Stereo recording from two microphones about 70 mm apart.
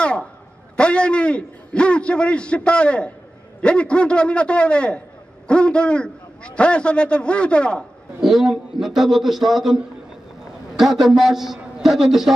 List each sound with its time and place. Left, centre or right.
0.0 s a sound: centre
0.7 s a man's voice: centre
8.2 s a man's voice: centre